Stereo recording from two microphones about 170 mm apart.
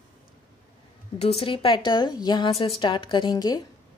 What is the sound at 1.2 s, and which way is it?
A woman's voice, 35° left (ahead or behind).